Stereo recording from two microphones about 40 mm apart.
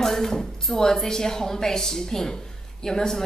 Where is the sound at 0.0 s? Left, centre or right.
Centre.